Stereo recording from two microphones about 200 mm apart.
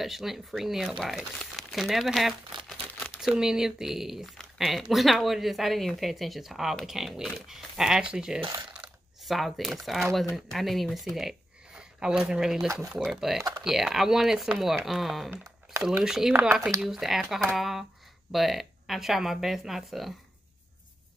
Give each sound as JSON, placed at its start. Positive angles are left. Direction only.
{"t": 0.0, "sound": "speech", "side_deg": 0}
{"t": 8.4, "sound": "speech", "side_deg": -25}
{"t": 9.2, "sound": "speech", "side_deg": 0}